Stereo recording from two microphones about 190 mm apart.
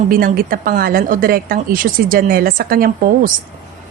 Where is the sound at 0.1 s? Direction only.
50° right (ahead or behind).